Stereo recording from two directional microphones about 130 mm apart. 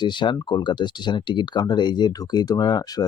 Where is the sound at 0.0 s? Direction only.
35° left (ahead or behind).